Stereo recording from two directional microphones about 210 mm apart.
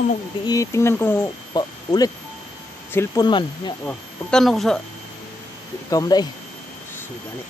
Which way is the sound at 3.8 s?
5° left (ahead or behind).